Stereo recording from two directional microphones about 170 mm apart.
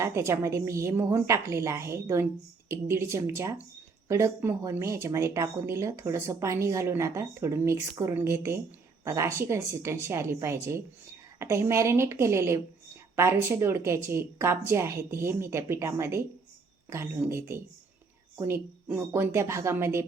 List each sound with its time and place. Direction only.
0.0 s speech: 15° right (ahead or behind)